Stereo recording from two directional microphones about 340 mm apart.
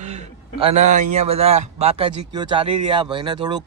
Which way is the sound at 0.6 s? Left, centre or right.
Centre.